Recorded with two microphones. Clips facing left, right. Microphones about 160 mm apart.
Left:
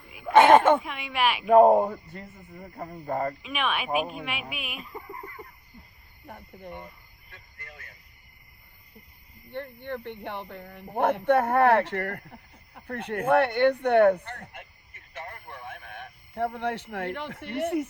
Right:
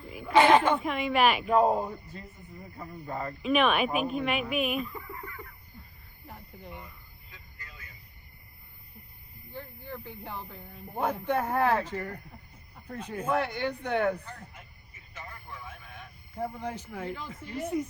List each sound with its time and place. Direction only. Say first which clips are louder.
0.3 s a sound: left 4 dB; 50° left (ahead or behind)
0.8 s speech: right 3 dB; centre (ahead or behind)
1.5 s a man's voice: left 7 dB; 55° left (ahead or behind)
3.4 s speech: right 5 dB; centre (ahead or behind)
4.8 s chicken: right 3 dB; 35° left (ahead or behind)
6.2 s speech: left 4 dB; 55° left (ahead or behind)
7.3 s vehicle: left 3 dB; 65° left (ahead or behind)
9.8 s speech: left 5 dB; 70° left (ahead or behind)